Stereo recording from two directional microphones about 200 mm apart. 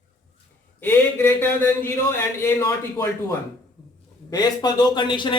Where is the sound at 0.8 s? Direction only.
10° left (ahead or behind).